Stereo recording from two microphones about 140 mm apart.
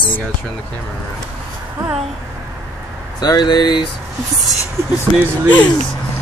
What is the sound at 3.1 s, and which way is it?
Speech, 30° left (ahead or behind).